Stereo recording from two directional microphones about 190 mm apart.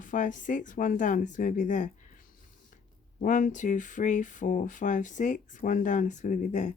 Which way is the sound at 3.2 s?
40° left (ahead or behind).